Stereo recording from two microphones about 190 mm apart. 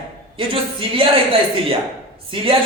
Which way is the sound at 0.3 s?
30° right (ahead or behind).